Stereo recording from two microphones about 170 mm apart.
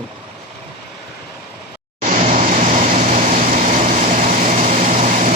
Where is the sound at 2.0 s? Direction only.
50° right (ahead or behind).